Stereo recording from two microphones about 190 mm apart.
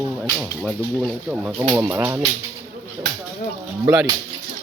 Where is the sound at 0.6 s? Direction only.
Centre (ahead or behind).